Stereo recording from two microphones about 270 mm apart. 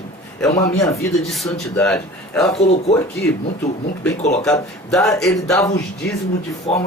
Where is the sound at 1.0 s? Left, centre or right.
Centre.